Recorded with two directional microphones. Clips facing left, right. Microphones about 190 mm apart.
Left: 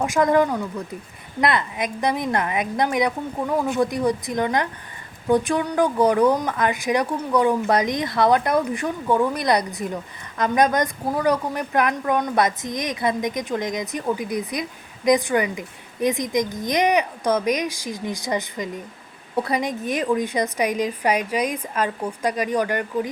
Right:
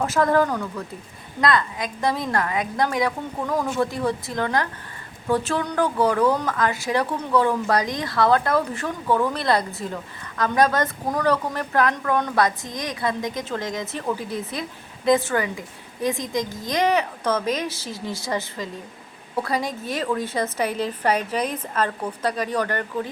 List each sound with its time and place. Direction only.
0.0 s a woman's voice: 15° left (ahead or behind)